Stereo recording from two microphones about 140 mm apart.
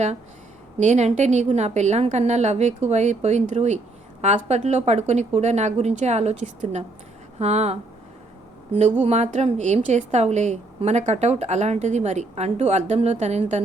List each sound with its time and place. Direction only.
0.8 s a woman's voice: 55° right (ahead or behind)
9.0 s a woman's voice: 50° right (ahead or behind)